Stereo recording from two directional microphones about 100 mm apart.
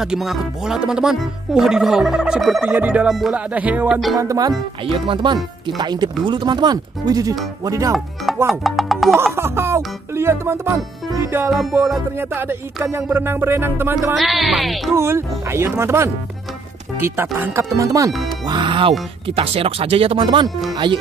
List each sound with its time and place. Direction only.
0.0 s speech: 5° right (ahead or behind)
2.6 s music: 15° right (ahead or behind)
3.1 s speech: centre (ahead or behind)
3.3 s music: 15° right (ahead or behind)
3.9 s speech: centre (ahead or behind)
4.2 s speech: 35° right (ahead or behind)
4.8 s speech: 65° right (ahead or behind); by 7.9 s 35° right (ahead or behind)
8.5 s speech: centre (ahead or behind)
9.2 s music: 25° right (ahead or behind)
12.2 s music: 20° right (ahead or behind)
14.1 s speech: centre (ahead or behind)
15.0 s music: 25° right (ahead or behind)
17.0 s speech: 25° right (ahead or behind)
18.5 s speech: 55° right (ahead or behind)